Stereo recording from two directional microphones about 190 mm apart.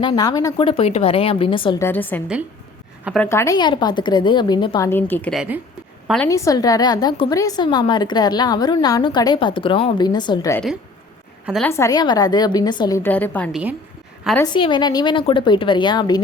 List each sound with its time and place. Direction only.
0.0 s a woman's voice: 20° left (ahead or behind)
1.8 s a woman's voice: 10° left (ahead or behind)
4.9 s a woman's voice: 10° left (ahead or behind)
11.6 s a woman's voice: 15° left (ahead or behind)
13.0 s a woman's voice: 10° left (ahead or behind)
13.5 s a woman's voice: 5° right (ahead or behind)
14.3 s a woman's voice: 20° left (ahead or behind)